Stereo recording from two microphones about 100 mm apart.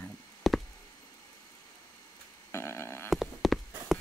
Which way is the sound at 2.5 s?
25° left (ahead or behind).